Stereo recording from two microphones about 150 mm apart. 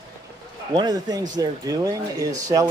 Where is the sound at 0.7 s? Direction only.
25° right (ahead or behind).